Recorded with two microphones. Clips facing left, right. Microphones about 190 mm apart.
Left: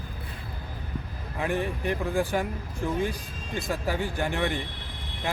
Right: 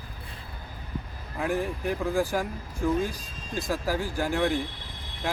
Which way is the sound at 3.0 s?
60° left (ahead or behind).